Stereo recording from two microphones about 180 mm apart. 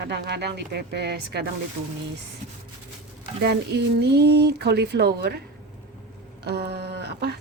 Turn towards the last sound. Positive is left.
turn(degrees=-65)  # may be behind; listen again after turning